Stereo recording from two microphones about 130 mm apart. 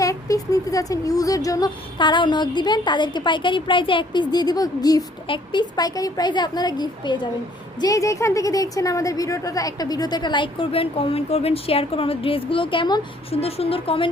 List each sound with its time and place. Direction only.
0.0 s a woman's voice: 25° left (ahead or behind)
7.8 s a woman's voice: 25° left (ahead or behind); by 14.1 s 45° left (ahead or behind)